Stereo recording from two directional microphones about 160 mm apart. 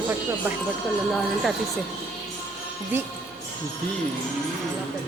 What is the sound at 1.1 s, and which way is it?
Speech, centre (ahead or behind).